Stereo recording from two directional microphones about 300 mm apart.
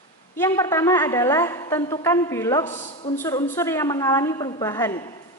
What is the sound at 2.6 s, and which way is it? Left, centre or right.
Speech, left.